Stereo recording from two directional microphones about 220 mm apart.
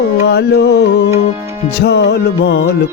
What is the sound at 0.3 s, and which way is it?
Music, 50° left (ahead or behind).